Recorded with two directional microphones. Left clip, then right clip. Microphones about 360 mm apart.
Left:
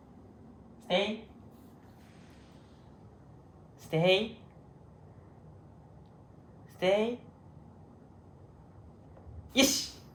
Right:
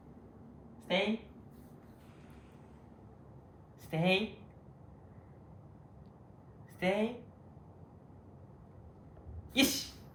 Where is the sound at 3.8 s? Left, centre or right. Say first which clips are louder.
Left 5 dB; centre.